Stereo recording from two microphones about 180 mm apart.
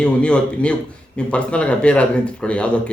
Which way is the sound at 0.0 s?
5° left (ahead or behind).